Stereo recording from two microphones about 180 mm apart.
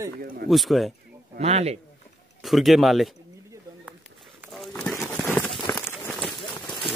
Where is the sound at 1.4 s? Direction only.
35° right (ahead or behind).